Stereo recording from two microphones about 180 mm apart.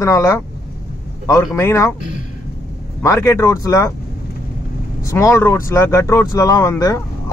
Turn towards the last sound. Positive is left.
turn(degrees=15)  # may be behind; listen again after turning